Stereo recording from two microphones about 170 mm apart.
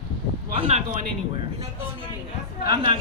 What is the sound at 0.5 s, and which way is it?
Speech, 35° right (ahead or behind).